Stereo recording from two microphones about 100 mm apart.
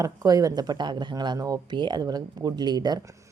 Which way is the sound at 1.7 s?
50° right (ahead or behind).